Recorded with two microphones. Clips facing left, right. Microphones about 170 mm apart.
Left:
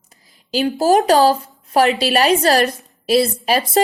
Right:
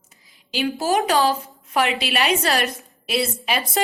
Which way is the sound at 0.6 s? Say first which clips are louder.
Left 6 dB; 40° left (ahead or behind).